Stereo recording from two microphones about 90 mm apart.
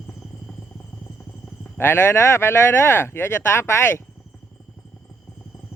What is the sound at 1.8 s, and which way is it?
Speech, 25° left (ahead or behind).